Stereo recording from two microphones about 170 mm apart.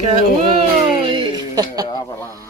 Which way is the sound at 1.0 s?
25° right (ahead or behind).